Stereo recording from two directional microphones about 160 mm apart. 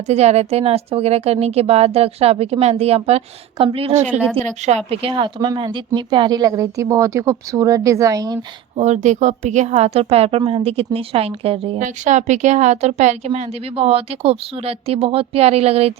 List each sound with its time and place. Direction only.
0.1 s speech: 40° right (ahead or behind)
4.2 s a woman's voice: 10° left (ahead or behind)
4.4 s a woman's voice: 45° right (ahead or behind)
4.9 s speech: 30° right (ahead or behind)
8.7 s speech: 45° right (ahead or behind)
12.0 s speech: 50° right (ahead or behind)